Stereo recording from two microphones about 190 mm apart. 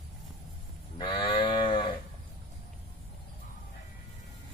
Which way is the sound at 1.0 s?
25° left (ahead or behind).